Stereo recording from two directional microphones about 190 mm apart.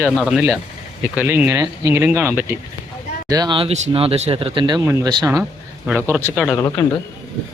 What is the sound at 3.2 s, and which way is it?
Speech, 20° right (ahead or behind).